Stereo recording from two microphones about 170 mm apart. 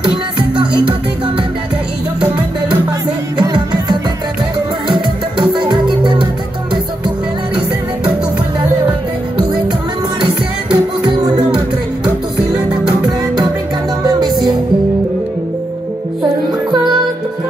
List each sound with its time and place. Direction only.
2.1 s music: 5° right (ahead or behind)
3.3 s music: 25° right (ahead or behind)
5.4 s music: 25° right (ahead or behind)
10.2 s music: 30° right (ahead or behind)
14.0 s music: 25° right (ahead or behind)